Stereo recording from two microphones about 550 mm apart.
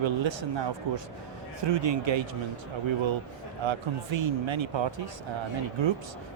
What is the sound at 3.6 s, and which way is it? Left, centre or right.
Speech, right.